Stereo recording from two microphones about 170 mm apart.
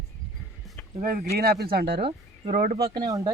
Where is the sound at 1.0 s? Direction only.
60° right (ahead or behind).